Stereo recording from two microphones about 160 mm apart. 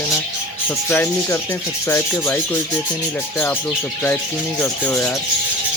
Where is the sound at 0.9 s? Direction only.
15° left (ahead or behind).